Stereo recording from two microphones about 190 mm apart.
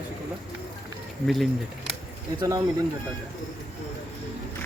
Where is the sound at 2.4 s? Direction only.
20° right (ahead or behind).